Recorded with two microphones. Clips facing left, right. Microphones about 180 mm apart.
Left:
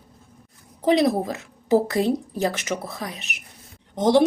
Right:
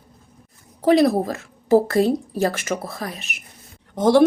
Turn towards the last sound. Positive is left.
turn(degrees=20)  # may be behind; listen again after turning